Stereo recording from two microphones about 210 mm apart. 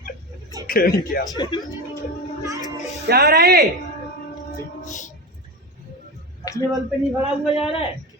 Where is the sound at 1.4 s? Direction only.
20° left (ahead or behind).